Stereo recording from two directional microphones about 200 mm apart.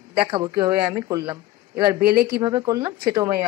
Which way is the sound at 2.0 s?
50° right (ahead or behind).